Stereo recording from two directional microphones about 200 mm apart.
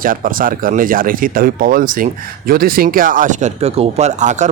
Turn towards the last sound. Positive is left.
turn(degrees=-35)  # may be behind; listen again after turning